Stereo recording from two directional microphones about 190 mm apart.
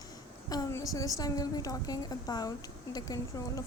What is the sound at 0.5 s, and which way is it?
A woman's voice, 20° left (ahead or behind).